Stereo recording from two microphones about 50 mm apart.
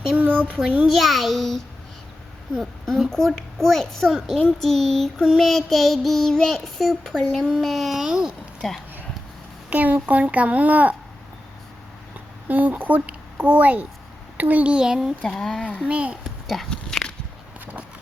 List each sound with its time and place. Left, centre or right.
0.2 s a sound: right
0.9 s child singing: centre
3.1 s a child's voice: centre
5.4 s child singing: centre
7.1 s a child's voice: centre
7.3 s child singing: centre
9.6 s a child's voice: right
12.5 s a child's voice: right
14.7 s speech: centre
15.3 s a child's voice: centre
15.7 s a child's voice: right
16.5 s biting: centre